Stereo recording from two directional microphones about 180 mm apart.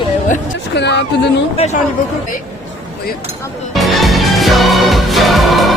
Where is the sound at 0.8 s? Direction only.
70° left (ahead or behind).